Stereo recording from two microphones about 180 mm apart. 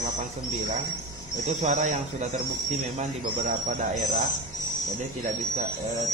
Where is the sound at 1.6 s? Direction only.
40° right (ahead or behind).